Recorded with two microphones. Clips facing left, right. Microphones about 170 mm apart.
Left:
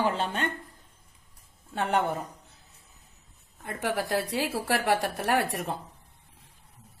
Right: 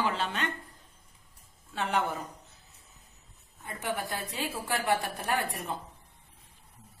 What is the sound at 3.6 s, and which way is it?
A woman's voice, 75° left (ahead or behind).